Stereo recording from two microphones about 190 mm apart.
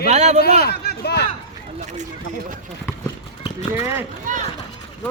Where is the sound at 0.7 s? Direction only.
60° left (ahead or behind).